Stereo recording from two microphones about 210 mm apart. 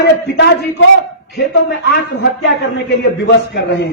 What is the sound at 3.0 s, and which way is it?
Speech, 50° left (ahead or behind).